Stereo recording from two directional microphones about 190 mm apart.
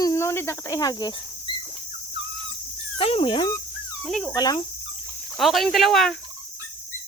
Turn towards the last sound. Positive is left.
turn(degrees=0)  # may be behind; listen again after turning